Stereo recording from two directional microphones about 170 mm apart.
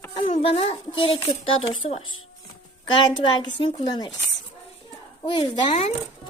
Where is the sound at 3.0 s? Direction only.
25° left (ahead or behind).